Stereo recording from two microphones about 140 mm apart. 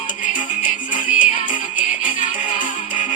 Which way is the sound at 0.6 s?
35° left (ahead or behind).